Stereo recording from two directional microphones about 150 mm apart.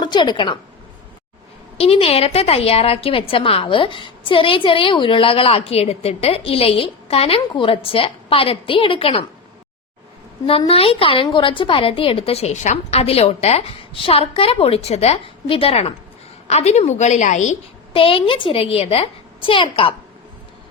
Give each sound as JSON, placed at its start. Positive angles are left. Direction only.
{"t": 0.0, "sound": "a woman's voice", "side_deg": 30}
{"t": 1.8, "sound": "a woman's voice", "side_deg": 40}
{"t": 10.7, "sound": "a woman's voice", "side_deg": 40}
{"t": 17.9, "sound": "a woman's voice", "side_deg": 35}